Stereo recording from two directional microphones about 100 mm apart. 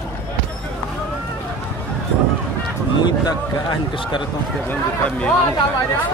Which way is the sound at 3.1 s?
45° left (ahead or behind).